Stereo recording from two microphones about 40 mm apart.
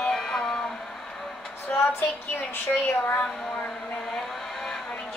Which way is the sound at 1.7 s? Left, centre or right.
Left.